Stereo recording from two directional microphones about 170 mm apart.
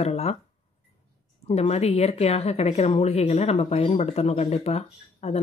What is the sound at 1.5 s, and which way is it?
Speech, 40° left (ahead or behind).